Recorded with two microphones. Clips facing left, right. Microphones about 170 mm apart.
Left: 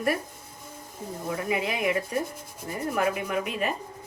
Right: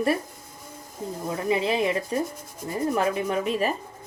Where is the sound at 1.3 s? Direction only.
30° right (ahead or behind).